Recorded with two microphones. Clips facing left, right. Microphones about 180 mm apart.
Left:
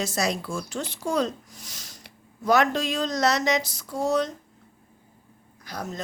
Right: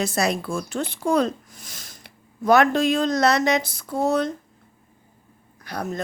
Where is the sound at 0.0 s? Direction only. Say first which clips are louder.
Right 4 dB; 60° right (ahead or behind).